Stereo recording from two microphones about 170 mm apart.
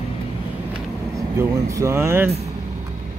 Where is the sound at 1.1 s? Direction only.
20° right (ahead or behind).